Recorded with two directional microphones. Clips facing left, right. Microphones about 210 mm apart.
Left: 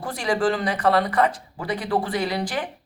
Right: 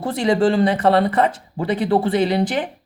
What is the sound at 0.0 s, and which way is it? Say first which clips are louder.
Speech: right 6 dB; 25° right (ahead or behind).